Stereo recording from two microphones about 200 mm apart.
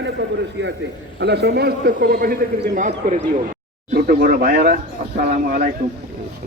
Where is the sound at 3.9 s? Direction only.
50° right (ahead or behind).